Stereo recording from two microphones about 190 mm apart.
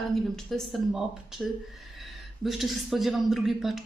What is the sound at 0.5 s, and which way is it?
Speech, centre (ahead or behind).